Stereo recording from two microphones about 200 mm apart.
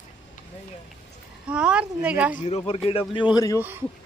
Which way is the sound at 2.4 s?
30° left (ahead or behind).